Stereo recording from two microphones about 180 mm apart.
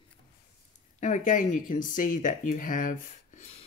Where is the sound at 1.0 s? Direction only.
45° left (ahead or behind).